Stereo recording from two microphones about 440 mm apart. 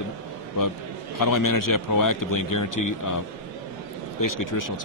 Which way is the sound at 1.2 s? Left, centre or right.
Left.